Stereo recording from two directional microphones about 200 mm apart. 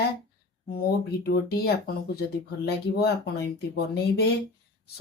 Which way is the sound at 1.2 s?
50° left (ahead or behind).